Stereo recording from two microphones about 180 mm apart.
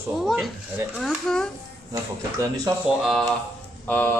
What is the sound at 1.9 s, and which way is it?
Speech, 20° right (ahead or behind).